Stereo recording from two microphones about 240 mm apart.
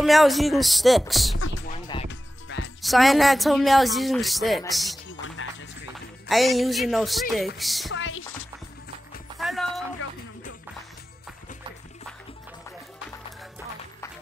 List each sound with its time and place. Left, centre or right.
0.0 s speech: centre
2.0 s music: left
2.8 s speech: centre
5.4 s music: left
6.2 s speech: centre
7.9 s music: left
9.4 s music: centre